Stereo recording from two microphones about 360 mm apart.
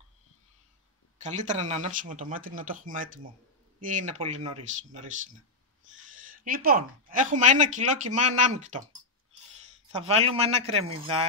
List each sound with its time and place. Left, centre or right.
1.1 s speech: centre
9.9 s a man's voice: centre